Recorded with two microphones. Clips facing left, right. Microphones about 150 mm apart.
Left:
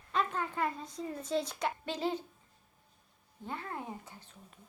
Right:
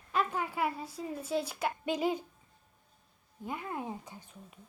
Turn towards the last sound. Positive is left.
turn(degrees=-10)  # may be behind; listen again after turning